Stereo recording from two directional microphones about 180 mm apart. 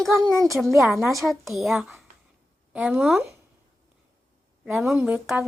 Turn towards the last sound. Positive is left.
turn(degrees=-5)  # may be behind; listen again after turning